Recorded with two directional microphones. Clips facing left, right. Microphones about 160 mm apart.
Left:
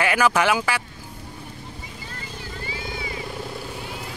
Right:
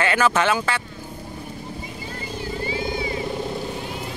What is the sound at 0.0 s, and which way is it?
Speech, 10° left (ahead or behind).